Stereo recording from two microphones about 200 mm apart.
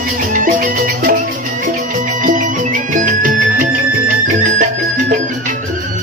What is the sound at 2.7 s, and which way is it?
Music, 40° right (ahead or behind).